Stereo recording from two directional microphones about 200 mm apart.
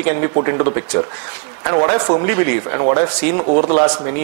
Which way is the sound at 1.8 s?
20° left (ahead or behind).